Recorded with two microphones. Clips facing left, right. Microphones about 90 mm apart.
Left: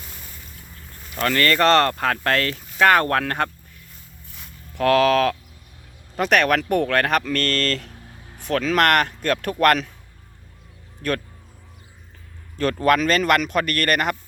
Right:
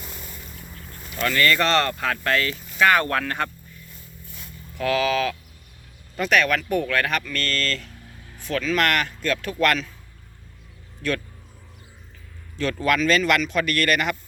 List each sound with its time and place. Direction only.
1.1 s speech: 45° left (ahead or behind)
4.8 s speech: 60° left (ahead or behind)
12.8 s speech: 45° left (ahead or behind)